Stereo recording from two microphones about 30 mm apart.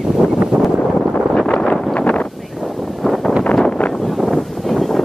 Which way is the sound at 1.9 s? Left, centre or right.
Left.